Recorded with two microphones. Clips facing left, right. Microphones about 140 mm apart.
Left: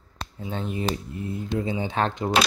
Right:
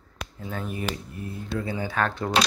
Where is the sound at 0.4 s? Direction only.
25° left (ahead or behind).